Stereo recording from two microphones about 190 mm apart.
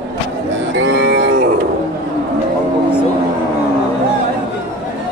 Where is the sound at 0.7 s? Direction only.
65° right (ahead or behind).